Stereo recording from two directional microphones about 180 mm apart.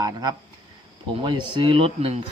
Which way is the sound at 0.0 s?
20° right (ahead or behind).